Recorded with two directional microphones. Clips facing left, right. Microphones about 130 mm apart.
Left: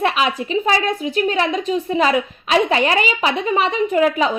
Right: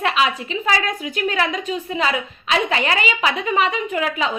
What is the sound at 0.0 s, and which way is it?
A woman's voice, 35° left (ahead or behind).